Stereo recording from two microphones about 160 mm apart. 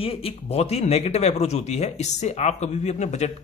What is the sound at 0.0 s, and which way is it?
Speech, 35° left (ahead or behind).